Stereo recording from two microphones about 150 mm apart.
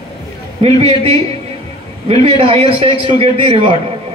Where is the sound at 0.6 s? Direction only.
40° right (ahead or behind).